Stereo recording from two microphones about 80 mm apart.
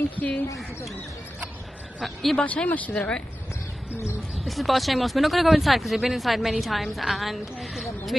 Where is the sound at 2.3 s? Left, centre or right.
Centre.